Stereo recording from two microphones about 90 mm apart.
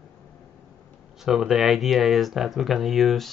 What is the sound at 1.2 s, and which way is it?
Speech, 5° right (ahead or behind).